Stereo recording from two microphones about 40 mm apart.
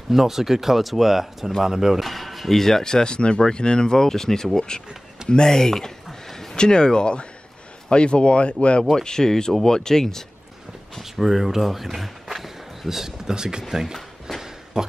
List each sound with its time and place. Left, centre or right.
0.1 s speech: centre
2.0 s speech: centre
6.2 s a sound: centre
6.5 s speech: left
8.9 s speech: centre
11.0 s speech: centre
14.4 s a sound: centre